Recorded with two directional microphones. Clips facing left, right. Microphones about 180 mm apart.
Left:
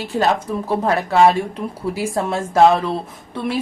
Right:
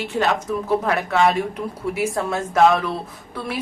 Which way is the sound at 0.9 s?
30° left (ahead or behind).